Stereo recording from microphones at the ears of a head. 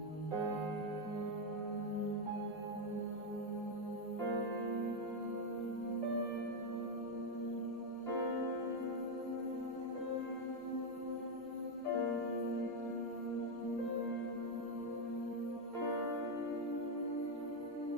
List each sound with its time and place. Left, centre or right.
11.9 s music: left